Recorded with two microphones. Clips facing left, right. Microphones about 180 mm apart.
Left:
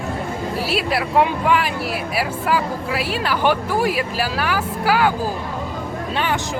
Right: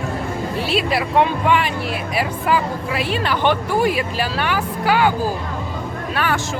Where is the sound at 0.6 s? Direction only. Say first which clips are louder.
Right 2 dB; 5° left (ahead or behind).